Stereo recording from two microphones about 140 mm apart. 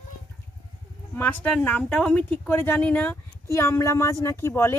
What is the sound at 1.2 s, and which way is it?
Speech, 10° left (ahead or behind).